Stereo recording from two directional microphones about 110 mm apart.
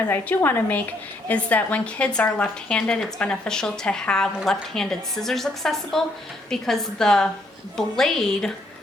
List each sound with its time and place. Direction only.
0.1 s a woman's voice: 20° left (ahead or behind)